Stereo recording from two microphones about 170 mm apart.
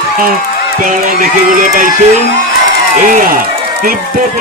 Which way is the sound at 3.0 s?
55° right (ahead or behind).